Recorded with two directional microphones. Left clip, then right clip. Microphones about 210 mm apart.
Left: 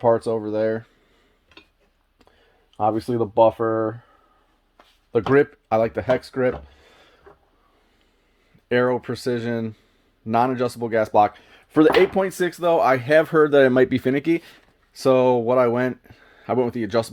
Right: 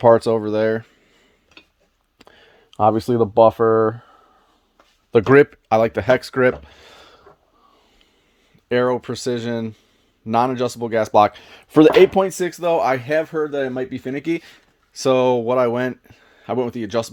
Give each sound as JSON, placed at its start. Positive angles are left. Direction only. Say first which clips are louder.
{"t": 0.0, "sound": "speech", "louder": "right 6 dB", "side_deg": -45}
{"t": 2.1, "sound": "speech", "louder": "right 9 dB", "side_deg": -40}
{"t": 5.2, "sound": "speech", "louder": "right 5 dB", "side_deg": -35}
{"t": 8.7, "sound": "speech", "louder": "right 2 dB", "side_deg": -15}
{"t": 12.2, "sound": "speech", "louder": "right 1 dB", "side_deg": -20}
{"t": 13.2, "sound": "speech", "louder": "left 7 dB", "side_deg": 35}
{"t": 14.2, "sound": "speech", "louder": "left 2 dB", "side_deg": -5}